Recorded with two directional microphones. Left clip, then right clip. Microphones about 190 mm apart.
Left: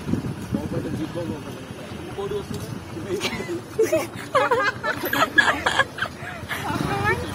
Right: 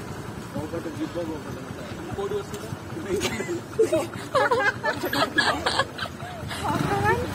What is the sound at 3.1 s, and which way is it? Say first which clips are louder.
Speech: even; 35° right (ahead or behind).